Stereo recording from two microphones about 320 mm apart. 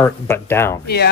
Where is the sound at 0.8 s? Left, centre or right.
Left.